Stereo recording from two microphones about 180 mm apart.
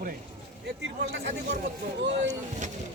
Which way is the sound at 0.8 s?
75° right (ahead or behind).